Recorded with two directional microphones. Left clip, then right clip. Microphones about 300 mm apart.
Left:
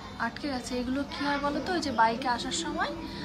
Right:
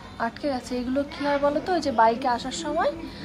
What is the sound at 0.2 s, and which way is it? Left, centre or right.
A woman's voice, centre.